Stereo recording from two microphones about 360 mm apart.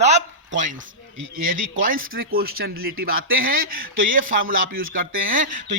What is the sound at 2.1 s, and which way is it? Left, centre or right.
Speech, right.